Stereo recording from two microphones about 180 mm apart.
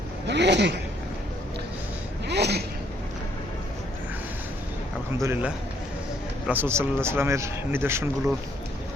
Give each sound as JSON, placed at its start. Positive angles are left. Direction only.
{"t": 0.3, "sound": "zipper", "side_deg": -75}
{"t": 2.2, "sound": "a sound", "side_deg": -65}
{"t": 5.2, "sound": "speech", "side_deg": -10}